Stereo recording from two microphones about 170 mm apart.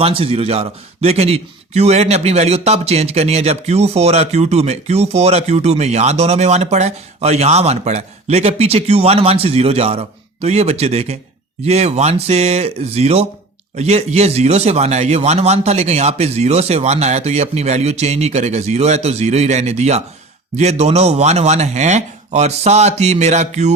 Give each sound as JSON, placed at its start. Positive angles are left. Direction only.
{"t": 0.0, "sound": "speech", "side_deg": -35}